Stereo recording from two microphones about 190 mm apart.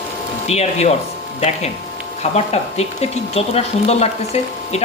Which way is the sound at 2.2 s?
35° left (ahead or behind).